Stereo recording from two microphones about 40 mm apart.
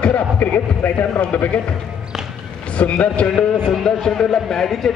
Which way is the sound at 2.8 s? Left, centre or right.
Left.